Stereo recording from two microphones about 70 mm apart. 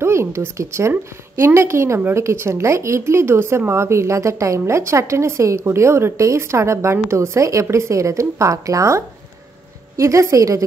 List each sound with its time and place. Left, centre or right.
0.0 s a woman's voice: right